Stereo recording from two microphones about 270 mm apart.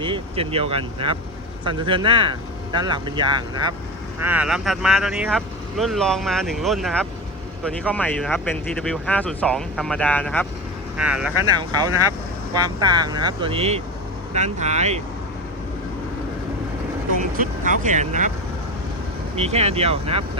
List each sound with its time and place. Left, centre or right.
0.0 s speech: centre
4.2 s speech: centre
11.4 s speech: centre
17.2 s speech: right
19.4 s speech: right